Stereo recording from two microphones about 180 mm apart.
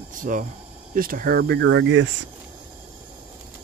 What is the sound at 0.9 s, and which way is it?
Speech, 50° right (ahead or behind).